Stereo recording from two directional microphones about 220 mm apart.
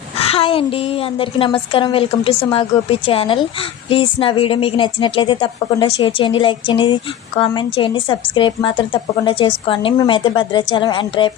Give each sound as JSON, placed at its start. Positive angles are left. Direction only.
{"t": 0.2, "sound": "a woman's voice", "side_deg": 25}